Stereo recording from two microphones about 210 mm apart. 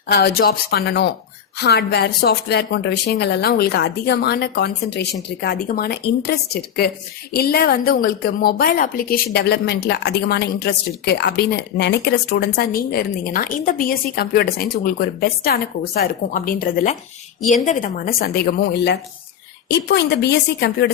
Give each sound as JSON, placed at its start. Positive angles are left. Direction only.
{"t": 0.1, "sound": "speech", "side_deg": 50}